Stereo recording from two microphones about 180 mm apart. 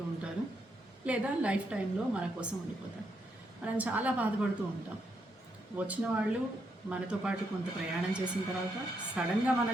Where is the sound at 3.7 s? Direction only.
10° right (ahead or behind).